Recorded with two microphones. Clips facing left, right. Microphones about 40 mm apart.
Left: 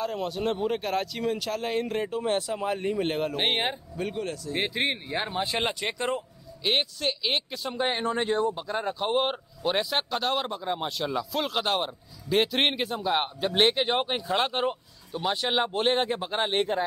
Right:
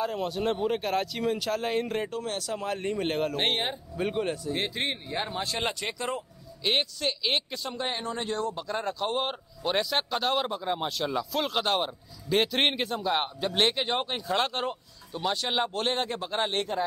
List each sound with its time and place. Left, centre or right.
0.0 s speech: centre
2.2 s speech: left
2.5 s speech: centre
4.1 s speech: centre
4.6 s speech: centre
6.6 s speech: centre
7.7 s speech: centre
8.0 s speech: left